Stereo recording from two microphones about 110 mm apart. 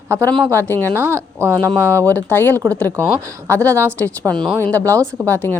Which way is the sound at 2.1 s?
15° left (ahead or behind).